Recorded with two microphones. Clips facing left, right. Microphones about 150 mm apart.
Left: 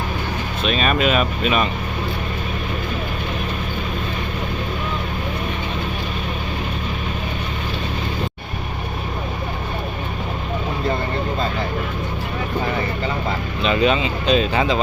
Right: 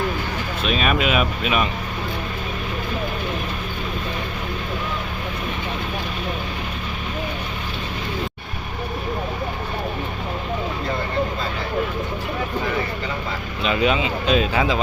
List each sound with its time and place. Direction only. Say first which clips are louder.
0.6 s speech: left 2 dB; 5° right (ahead or behind)
13.6 s speech: left 2 dB; 10° right (ahead or behind)